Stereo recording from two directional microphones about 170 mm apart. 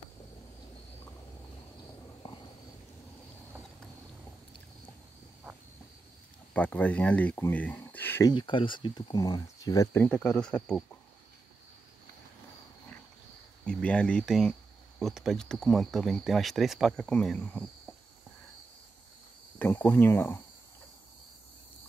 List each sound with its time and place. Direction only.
6.5 s speech: 10° left (ahead or behind)
8.3 s speech: 25° left (ahead or behind)
10.0 s speech: 5° left (ahead or behind)
13.7 s speech: 5° left (ahead or behind)
19.6 s speech: 15° left (ahead or behind)